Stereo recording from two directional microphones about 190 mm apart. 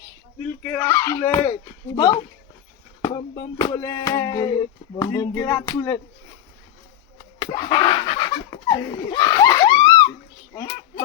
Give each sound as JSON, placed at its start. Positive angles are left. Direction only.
{"t": 0.6, "sound": "speech", "side_deg": 10}
{"t": 2.0, "sound": "music", "side_deg": 20}
{"t": 7.3, "sound": "a sound", "side_deg": 25}